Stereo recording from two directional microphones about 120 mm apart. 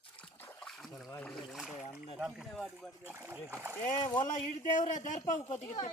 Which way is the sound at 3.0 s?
20° right (ahead or behind).